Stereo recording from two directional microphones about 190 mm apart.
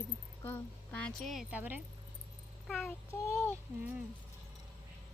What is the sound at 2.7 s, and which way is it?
Child singing, centre (ahead or behind).